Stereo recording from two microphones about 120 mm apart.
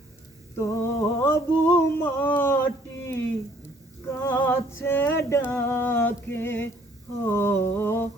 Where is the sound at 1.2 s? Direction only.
20° left (ahead or behind).